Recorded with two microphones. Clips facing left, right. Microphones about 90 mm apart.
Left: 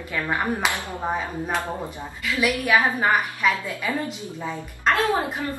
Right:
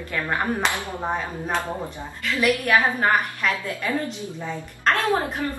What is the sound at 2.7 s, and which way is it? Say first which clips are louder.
A woman's voice: left 2 dB; 5° left (ahead or behind).